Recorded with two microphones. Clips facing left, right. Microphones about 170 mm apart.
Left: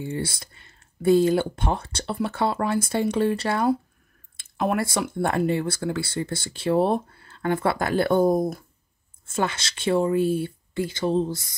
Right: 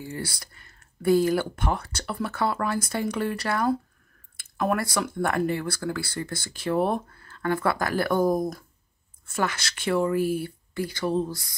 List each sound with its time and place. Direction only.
0.0 s speech: 25° left (ahead or behind)